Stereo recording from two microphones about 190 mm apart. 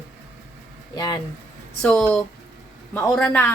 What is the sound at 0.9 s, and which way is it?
Speech, 20° left (ahead or behind).